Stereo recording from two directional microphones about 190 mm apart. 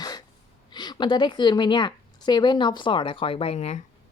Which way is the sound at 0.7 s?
25° left (ahead or behind).